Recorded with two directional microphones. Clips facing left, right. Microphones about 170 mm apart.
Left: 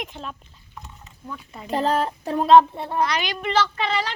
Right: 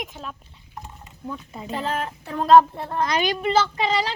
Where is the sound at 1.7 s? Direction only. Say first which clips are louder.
Left 5 dB; 35° left (ahead or behind).